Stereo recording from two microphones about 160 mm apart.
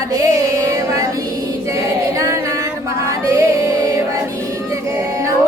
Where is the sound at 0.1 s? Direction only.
20° right (ahead or behind).